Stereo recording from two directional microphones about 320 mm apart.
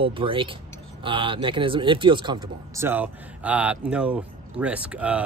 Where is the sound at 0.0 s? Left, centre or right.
Centre.